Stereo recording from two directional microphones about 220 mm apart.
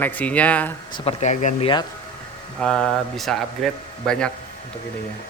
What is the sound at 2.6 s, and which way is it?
A man's voice, 5° left (ahead or behind).